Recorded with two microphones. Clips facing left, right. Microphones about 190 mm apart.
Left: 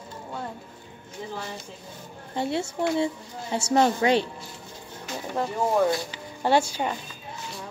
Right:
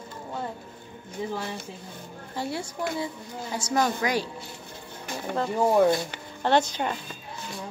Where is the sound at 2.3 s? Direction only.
25° left (ahead or behind).